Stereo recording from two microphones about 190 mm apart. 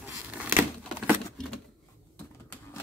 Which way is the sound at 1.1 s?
Centre (ahead or behind).